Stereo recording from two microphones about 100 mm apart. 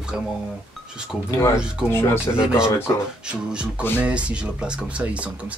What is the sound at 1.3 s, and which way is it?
Speech, 30° left (ahead or behind).